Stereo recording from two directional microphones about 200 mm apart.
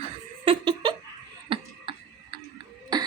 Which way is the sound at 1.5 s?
25° right (ahead or behind).